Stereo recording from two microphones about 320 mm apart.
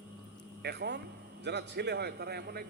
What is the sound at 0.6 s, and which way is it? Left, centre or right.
A man's voice, right.